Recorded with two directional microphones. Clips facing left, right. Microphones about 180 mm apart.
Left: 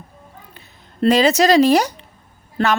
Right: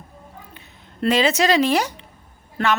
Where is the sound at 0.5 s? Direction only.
40° left (ahead or behind).